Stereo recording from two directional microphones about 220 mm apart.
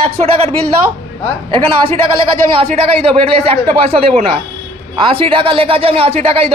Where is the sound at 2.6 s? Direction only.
25° right (ahead or behind).